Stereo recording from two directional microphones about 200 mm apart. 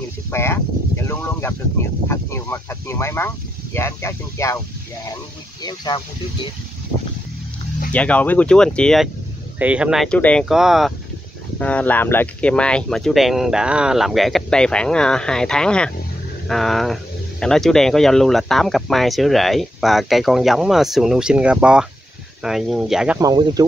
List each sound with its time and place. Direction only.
0.3 s speech: 10° left (ahead or behind)
5.6 s speech: 20° left (ahead or behind)
7.9 s speech: 5° left (ahead or behind)
23.2 s speech: 20° right (ahead or behind)